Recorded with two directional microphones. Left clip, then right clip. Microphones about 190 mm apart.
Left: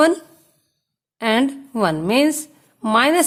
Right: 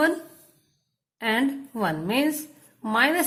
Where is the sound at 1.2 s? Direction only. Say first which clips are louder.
Left 6 dB; 40° left (ahead or behind).